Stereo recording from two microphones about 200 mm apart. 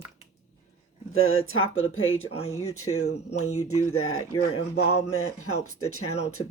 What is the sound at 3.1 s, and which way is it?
Speech, 35° left (ahead or behind).